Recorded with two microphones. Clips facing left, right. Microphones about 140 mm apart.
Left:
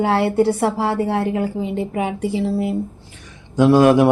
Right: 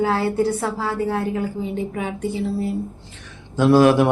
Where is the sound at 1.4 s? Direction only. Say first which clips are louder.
Left 3 dB; 80° left.